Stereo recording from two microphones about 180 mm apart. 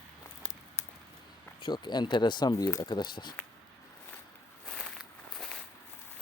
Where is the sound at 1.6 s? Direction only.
25° left (ahead or behind).